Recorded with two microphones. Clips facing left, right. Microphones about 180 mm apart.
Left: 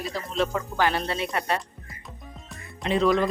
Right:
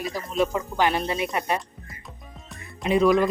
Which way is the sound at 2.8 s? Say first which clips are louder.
Right 3 dB; 10° right (ahead or behind).